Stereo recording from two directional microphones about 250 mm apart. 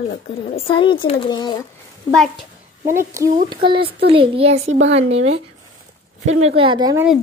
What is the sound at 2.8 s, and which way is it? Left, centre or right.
A woman's voice, centre.